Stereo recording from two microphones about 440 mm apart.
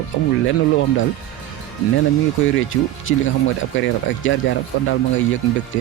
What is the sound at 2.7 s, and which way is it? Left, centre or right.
Speech, left.